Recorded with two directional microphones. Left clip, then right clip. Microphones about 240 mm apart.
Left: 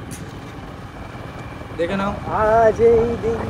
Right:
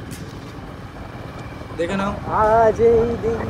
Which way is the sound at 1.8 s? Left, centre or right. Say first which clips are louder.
Left 1 dB; centre.